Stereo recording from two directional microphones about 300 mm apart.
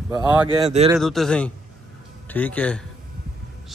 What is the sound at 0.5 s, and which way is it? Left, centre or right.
Speech, centre.